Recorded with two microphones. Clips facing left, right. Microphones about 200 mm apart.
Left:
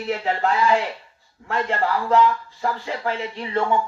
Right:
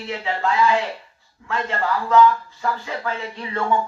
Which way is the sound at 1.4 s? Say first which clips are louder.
Left 1 dB; 35° left (ahead or behind).